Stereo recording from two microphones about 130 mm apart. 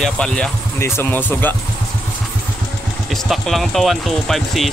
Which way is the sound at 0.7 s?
20° left (ahead or behind).